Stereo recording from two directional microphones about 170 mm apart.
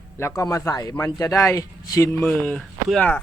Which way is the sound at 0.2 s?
15° left (ahead or behind).